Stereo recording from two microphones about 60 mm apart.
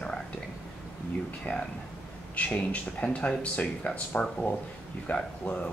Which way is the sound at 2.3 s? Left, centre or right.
Left.